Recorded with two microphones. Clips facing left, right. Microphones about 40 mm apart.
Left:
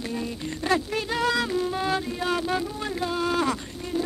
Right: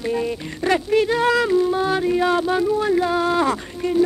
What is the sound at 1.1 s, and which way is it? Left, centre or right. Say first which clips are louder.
Music: right 7 dB; right.